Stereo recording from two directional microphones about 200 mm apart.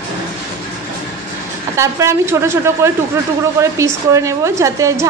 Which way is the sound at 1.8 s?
15° right (ahead or behind).